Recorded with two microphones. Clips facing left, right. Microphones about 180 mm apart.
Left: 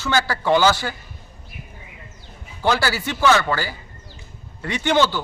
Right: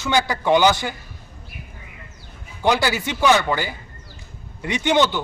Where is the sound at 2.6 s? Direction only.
15° right (ahead or behind).